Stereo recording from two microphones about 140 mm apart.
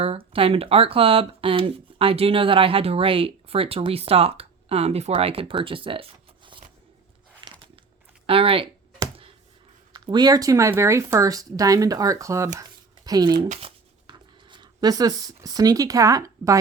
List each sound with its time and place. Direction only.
0.0 s speech: 45° right (ahead or behind)
7.4 s a sound: 35° right (ahead or behind)
8.3 s speech: 40° right (ahead or behind)
9.9 s speech: 30° right (ahead or behind)
13.6 s writing: 35° right (ahead or behind)